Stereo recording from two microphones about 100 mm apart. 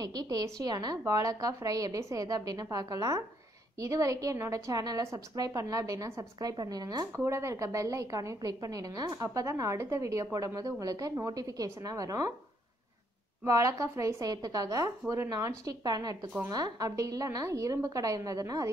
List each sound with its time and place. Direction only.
0.0 s a woman's voice: 40° right (ahead or behind)
7.2 s a woman's voice: 30° right (ahead or behind)
13.5 s a woman's voice: 30° right (ahead or behind)